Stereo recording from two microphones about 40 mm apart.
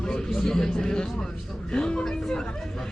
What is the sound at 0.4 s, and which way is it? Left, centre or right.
Speech, centre.